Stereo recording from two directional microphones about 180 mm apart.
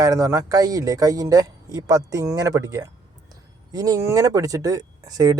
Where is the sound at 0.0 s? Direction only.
15° right (ahead or behind).